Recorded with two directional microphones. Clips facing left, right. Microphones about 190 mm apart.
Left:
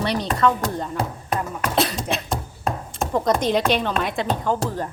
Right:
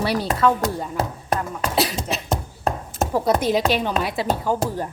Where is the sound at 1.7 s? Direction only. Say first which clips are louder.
Left 1 dB; 5° right (ahead or behind).